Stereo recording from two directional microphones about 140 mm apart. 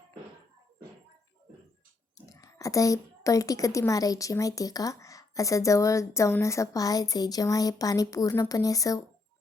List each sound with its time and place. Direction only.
2.1 s speech: 25° left (ahead or behind)